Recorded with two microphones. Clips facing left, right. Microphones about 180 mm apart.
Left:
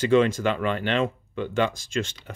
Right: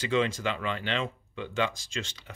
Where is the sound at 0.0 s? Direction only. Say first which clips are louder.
Left 8 dB; 50° left (ahead or behind).